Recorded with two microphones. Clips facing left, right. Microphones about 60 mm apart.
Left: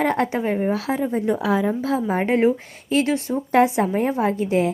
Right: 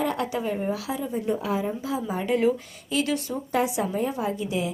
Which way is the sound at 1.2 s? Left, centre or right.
Left.